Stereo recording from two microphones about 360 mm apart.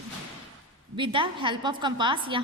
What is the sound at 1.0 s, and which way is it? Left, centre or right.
Speech, centre.